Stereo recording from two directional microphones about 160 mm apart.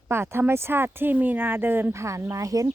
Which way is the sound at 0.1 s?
15° right (ahead or behind).